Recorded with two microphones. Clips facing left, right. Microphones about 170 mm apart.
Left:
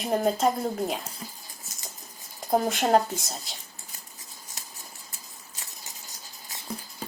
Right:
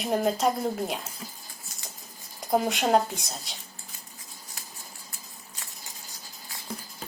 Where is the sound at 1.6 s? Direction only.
40° left (ahead or behind).